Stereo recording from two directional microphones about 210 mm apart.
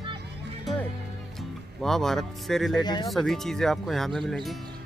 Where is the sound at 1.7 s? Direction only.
Centre (ahead or behind).